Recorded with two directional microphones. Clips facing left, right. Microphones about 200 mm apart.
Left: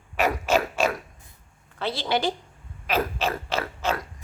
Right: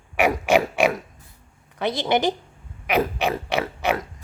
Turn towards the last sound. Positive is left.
turn(degrees=-15)  # may be behind; listen again after turning